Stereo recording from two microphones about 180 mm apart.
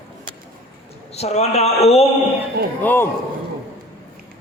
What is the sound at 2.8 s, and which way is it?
Speech, 10° left (ahead or behind).